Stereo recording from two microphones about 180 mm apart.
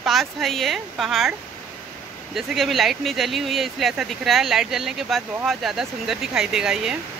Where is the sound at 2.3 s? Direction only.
Centre (ahead or behind).